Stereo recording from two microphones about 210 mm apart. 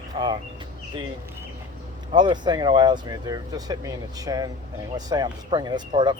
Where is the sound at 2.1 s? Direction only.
20° right (ahead or behind).